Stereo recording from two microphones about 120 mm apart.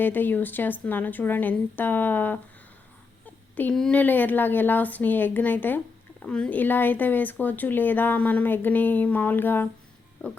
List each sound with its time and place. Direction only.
0.0 s speech: 15° left (ahead or behind)
3.5 s speech: 10° left (ahead or behind)